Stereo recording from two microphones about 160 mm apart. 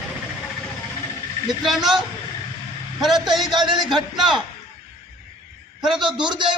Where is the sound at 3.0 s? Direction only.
Centre (ahead or behind).